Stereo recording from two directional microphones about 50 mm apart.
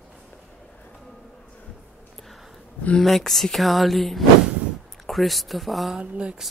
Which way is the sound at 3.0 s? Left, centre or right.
Centre.